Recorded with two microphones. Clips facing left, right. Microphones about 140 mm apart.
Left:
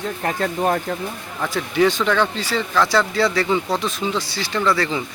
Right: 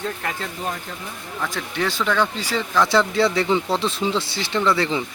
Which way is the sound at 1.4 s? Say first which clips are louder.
Left 8 dB; 5° left (ahead or behind).